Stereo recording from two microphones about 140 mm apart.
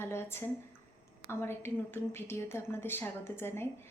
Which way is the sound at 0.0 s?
15° left (ahead or behind).